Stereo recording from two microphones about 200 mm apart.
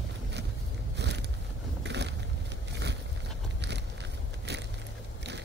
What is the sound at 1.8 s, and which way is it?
Vehicle, 60° right (ahead or behind).